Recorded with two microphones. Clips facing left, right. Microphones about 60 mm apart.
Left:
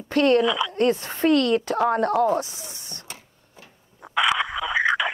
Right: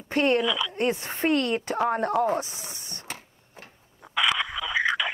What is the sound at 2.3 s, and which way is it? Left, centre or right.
Speech, right.